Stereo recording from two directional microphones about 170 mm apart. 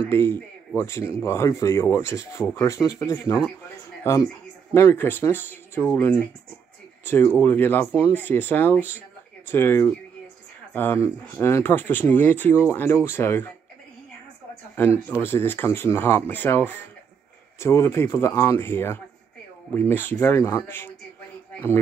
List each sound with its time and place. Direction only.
0.1 s speech: 15° left (ahead or behind)
15.2 s speech: 10° left (ahead or behind)